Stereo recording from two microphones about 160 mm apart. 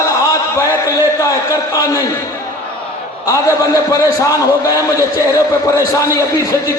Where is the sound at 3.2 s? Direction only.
20° left (ahead or behind).